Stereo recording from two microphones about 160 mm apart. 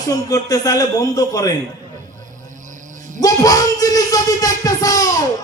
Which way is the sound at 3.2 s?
20° left (ahead or behind).